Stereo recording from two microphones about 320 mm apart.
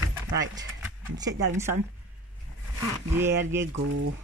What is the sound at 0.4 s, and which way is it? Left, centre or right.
Speech, centre.